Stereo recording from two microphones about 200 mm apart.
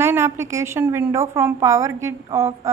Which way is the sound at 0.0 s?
15° right (ahead or behind).